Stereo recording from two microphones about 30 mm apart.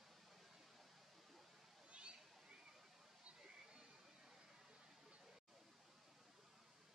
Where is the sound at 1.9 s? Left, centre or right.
Right.